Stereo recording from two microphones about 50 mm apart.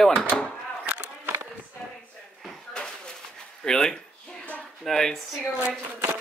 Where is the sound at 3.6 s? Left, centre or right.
Centre.